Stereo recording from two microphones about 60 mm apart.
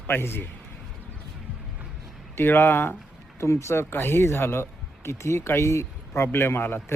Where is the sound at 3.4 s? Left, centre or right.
Left.